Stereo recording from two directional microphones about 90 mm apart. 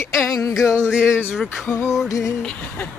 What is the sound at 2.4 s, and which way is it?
Speech, 15° left (ahead or behind).